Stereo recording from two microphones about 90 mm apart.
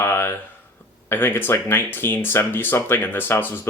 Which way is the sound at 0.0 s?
25° left (ahead or behind).